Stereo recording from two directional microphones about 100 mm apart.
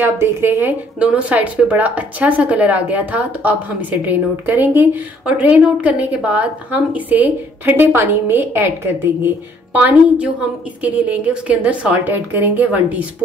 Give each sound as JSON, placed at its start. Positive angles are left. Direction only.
{"t": 0.0, "sound": "a woman's voice", "side_deg": -25}